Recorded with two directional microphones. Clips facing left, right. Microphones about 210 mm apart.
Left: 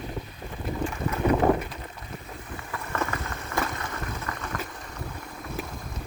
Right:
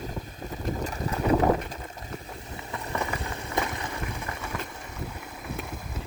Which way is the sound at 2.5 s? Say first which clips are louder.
Left 1 dB; 20° right (ahead or behind).